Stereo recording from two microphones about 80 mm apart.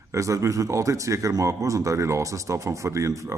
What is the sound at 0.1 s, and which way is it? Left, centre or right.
A man's voice, right.